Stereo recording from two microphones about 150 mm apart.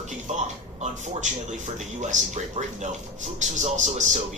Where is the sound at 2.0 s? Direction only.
55° right (ahead or behind).